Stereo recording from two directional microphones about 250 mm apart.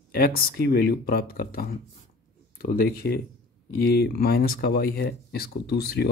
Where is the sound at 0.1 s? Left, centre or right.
Left.